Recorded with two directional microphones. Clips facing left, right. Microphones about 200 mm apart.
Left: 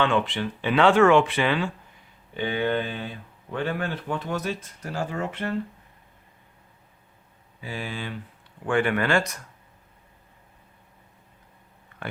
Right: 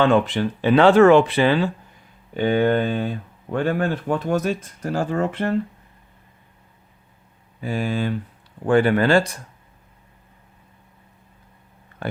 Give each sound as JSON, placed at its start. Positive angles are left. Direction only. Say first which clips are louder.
{"t": 0.0, "sound": "speech", "louder": "right 6 dB", "side_deg": -40}
{"t": 2.3, "sound": "speech", "louder": "right 7 dB", "side_deg": -45}
{"t": 7.6, "sound": "speech", "louder": "right 10 dB", "side_deg": -45}